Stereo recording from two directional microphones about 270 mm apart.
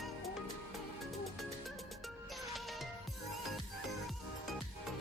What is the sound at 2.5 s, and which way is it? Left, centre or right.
Music, centre.